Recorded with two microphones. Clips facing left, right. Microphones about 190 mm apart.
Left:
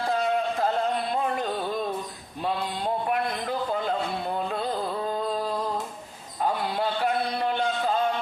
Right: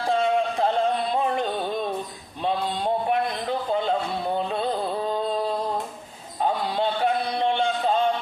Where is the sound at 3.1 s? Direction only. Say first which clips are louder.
Right 3 dB; 25° right (ahead or behind).